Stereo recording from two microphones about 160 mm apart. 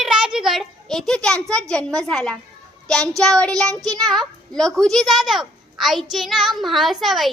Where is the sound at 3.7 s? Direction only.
20° right (ahead or behind).